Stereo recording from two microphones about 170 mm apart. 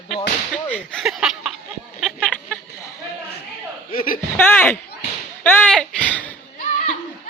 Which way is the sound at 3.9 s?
55° left (ahead or behind).